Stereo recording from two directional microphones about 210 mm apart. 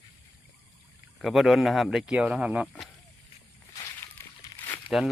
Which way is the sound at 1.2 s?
Centre (ahead or behind).